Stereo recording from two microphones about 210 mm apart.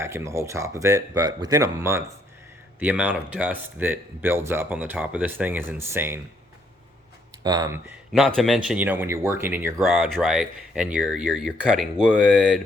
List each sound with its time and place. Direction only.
0.0 s speech: 15° right (ahead or behind)
7.4 s speech: 20° right (ahead or behind)
8.4 s speech: centre (ahead or behind)